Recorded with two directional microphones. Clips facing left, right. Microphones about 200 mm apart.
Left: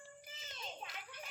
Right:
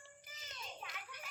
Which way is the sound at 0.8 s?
25° left (ahead or behind).